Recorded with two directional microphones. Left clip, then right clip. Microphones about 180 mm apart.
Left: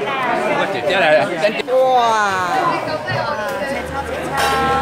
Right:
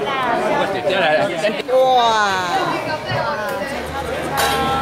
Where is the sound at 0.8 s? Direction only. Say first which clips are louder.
Left 5 dB; 35° left (ahead or behind).